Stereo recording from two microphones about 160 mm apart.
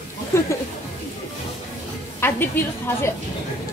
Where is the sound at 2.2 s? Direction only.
15° left (ahead or behind).